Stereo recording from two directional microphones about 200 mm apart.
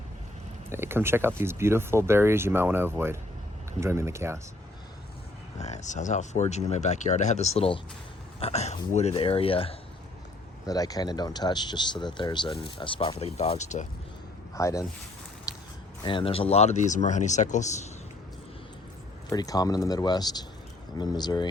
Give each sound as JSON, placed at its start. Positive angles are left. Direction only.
{"t": 0.7, "sound": "speech", "side_deg": -10}
{"t": 5.5, "sound": "speech", "side_deg": 35}
{"t": 10.7, "sound": "speech", "side_deg": 20}
{"t": 14.5, "sound": "speech", "side_deg": 15}
{"t": 15.5, "sound": "a sound", "side_deg": 15}
{"t": 16.0, "sound": "speech", "side_deg": 25}
{"t": 19.3, "sound": "speech", "side_deg": 20}